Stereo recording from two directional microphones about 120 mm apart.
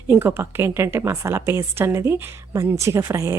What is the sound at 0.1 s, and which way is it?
A woman's voice, 20° right (ahead or behind).